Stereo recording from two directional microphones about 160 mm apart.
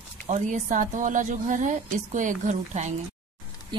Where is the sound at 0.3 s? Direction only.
50° right (ahead or behind).